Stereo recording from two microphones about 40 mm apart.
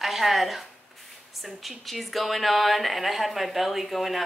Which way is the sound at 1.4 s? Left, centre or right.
Centre.